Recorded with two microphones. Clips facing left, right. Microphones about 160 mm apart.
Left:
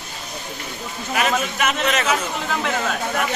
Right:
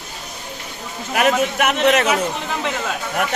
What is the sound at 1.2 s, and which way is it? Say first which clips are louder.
Speech: right 4 dB; 60° right (ahead or behind).